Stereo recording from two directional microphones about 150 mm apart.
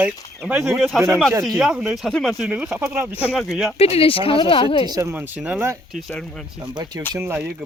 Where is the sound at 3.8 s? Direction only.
40° left (ahead or behind).